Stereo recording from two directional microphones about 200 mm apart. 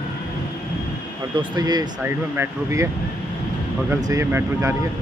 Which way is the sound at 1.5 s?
20° right (ahead or behind).